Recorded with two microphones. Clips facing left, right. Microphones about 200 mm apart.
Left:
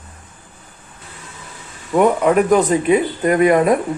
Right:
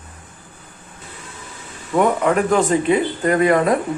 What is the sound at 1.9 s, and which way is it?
Speech, 20° left (ahead or behind).